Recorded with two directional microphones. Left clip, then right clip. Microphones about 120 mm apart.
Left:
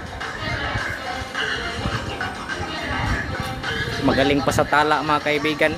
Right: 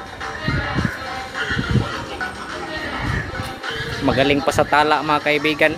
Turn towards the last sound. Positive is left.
turn(degrees=-15)  # may be behind; listen again after turning